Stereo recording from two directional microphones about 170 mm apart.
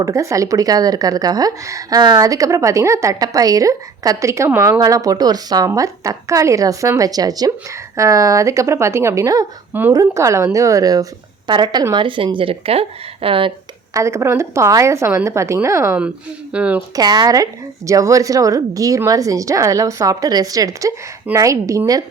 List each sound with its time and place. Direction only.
0.0 s a woman's voice: 20° right (ahead or behind)
13.9 s a woman's voice: 15° right (ahead or behind)
16.9 s a woman's voice: 25° right (ahead or behind)